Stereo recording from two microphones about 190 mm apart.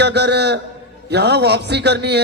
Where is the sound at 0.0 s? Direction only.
65° right (ahead or behind).